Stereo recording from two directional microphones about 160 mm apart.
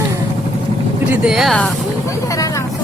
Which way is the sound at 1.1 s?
5° right (ahead or behind).